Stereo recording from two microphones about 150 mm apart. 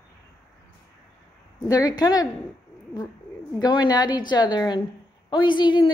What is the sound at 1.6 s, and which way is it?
Speech, 25° left (ahead or behind).